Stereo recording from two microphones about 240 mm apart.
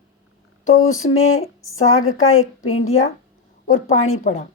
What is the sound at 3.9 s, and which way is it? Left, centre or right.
Speech, left.